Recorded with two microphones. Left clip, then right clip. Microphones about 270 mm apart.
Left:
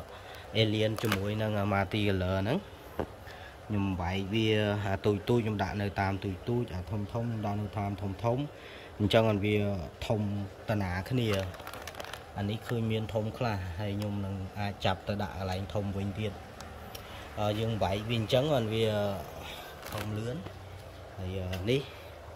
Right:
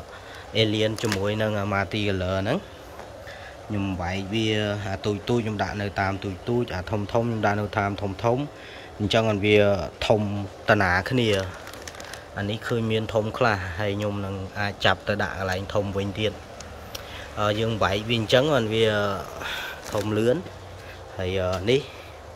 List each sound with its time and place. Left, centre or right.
0.5 s speech: centre
0.9 s speech: left
1.2 s speech: centre
3.7 s speech: centre
21.2 s speech: centre